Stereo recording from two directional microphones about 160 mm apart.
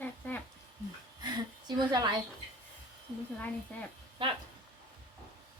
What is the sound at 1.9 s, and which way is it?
Speech, 25° right (ahead or behind).